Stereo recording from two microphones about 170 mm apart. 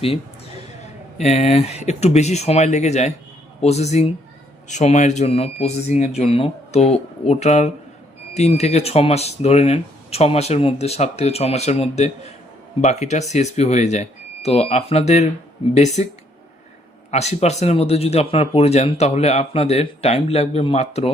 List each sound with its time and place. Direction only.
0.0 s a sound: 35° left (ahead or behind)
1.2 s speech: 40° left (ahead or behind)
17.1 s speech: 40° left (ahead or behind)